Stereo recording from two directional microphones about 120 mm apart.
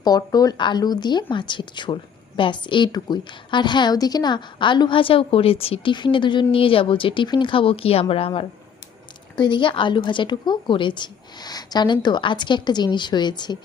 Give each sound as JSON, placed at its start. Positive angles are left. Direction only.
{"t": 0.0, "sound": "a woman's voice", "side_deg": 30}